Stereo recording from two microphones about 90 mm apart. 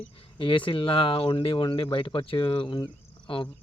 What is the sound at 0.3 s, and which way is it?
Speech, 70° left (ahead or behind).